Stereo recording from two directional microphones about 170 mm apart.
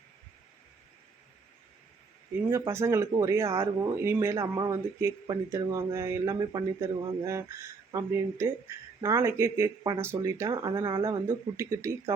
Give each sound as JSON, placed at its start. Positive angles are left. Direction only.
{"t": 2.5, "sound": "a man's voice", "side_deg": -15}